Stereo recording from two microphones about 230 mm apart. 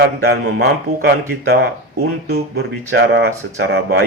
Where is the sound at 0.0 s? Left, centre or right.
Right.